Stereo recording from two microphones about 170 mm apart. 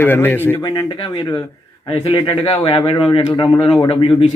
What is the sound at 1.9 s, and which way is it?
A man's voice, 30° left (ahead or behind).